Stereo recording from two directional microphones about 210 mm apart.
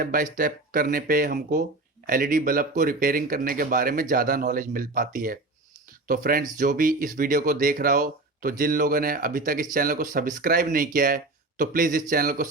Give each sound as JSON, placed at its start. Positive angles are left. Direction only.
{"t": 0.0, "sound": "speech", "side_deg": -40}